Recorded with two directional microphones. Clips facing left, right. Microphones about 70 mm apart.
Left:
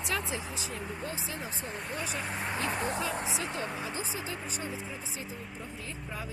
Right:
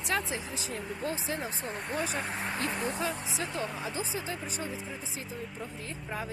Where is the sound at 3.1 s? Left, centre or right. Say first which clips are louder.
Left 1 dB; left.